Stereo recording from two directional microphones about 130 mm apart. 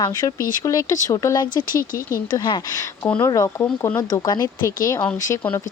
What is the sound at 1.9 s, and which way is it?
Speech, 90° left.